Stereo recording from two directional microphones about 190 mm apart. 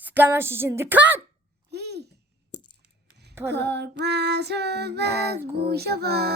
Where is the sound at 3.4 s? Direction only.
60° right (ahead or behind).